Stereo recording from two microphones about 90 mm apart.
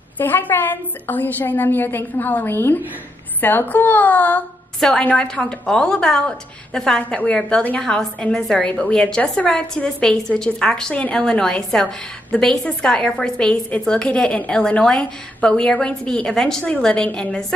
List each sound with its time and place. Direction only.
0.2 s a woman's voice: 20° left (ahead or behind)
4.7 s a woman's voice: 5° left (ahead or behind)